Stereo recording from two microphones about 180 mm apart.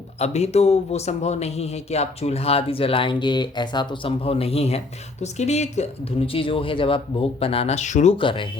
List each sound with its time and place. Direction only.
0.2 s a man's voice: 35° left (ahead or behind)
8.2 s speech: 25° left (ahead or behind)